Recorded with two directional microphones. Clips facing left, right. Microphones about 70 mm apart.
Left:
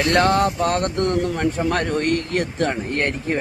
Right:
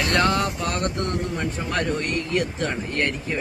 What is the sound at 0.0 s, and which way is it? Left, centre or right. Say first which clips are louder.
Speech: left 4 dB; left.